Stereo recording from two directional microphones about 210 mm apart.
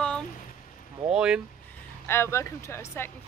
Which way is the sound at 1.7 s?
10° left (ahead or behind).